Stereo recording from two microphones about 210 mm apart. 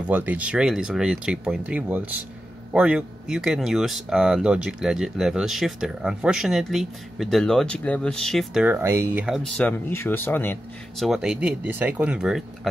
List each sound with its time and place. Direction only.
0.1 s speech: 10° right (ahead or behind); by 11.1 s 10° left (ahead or behind)
11.1 s speech: 5° right (ahead or behind)